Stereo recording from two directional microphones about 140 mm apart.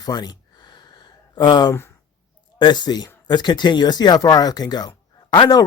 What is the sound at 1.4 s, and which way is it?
A man's voice, 30° left (ahead or behind).